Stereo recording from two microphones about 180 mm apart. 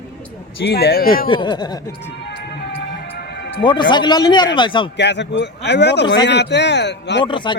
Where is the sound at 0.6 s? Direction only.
65° left (ahead or behind).